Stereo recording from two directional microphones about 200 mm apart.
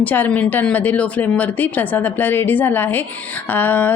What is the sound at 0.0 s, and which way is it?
A woman's voice, 10° left (ahead or behind).